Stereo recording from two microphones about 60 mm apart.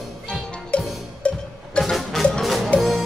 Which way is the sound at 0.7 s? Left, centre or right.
Left.